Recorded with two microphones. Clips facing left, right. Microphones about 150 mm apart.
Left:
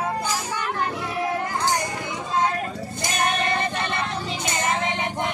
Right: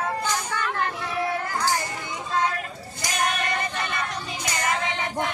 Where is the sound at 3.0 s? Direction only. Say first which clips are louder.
Left 2 dB; 25° left (ahead or behind).